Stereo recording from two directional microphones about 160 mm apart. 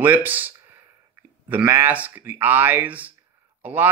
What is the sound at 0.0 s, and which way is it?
Speech, 10° right (ahead or behind).